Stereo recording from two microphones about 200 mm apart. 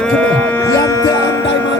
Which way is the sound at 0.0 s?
5° left (ahead or behind).